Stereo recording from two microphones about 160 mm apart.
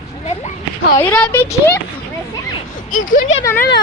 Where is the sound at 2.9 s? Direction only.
55° left (ahead or behind).